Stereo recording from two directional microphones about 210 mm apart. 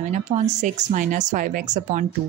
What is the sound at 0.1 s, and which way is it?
A woman's voice, 35° right (ahead or behind).